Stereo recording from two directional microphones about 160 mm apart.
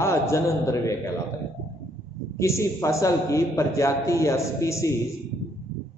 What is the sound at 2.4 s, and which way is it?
A man's voice, 20° left (ahead or behind).